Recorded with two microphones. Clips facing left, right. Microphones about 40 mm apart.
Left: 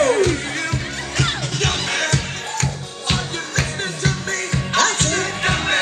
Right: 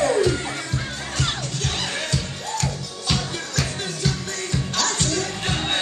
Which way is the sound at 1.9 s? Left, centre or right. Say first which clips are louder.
Left 6 dB; left.